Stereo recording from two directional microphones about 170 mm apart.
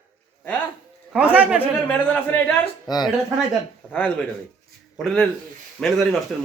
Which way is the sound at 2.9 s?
25° left (ahead or behind).